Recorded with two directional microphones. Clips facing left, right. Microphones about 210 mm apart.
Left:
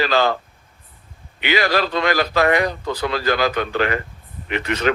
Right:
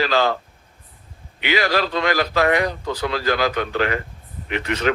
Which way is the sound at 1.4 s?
55° left (ahead or behind).